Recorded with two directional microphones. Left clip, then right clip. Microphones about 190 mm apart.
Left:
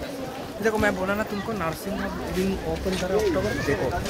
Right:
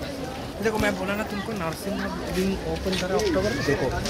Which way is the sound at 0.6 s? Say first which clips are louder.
Left 2 dB; 30° left (ahead or behind).